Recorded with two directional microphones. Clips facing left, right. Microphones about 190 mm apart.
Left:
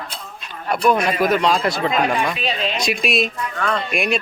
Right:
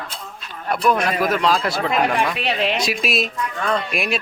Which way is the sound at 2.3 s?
65° right (ahead or behind).